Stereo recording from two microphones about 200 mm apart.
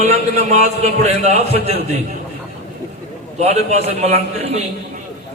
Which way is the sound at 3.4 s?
35° right (ahead or behind).